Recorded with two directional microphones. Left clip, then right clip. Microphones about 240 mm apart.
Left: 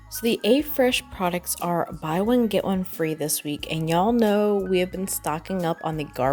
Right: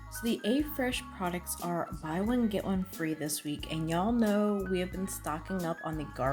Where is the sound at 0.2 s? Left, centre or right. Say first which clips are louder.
Left 11 dB; left.